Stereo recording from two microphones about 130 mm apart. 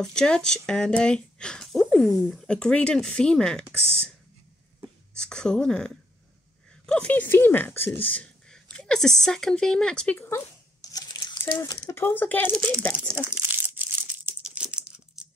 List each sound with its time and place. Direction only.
0.0 s speech: 5° left (ahead or behind)
4.7 s a sound: 5° left (ahead or behind)
6.9 s speech: 10° left (ahead or behind)
10.8 s a sound: 30° left (ahead or behind)
11.6 s speech: 25° left (ahead or behind)
13.1 s crumpling: 15° right (ahead or behind)